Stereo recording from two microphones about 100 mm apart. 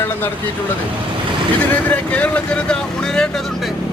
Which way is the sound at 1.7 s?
15° left (ahead or behind).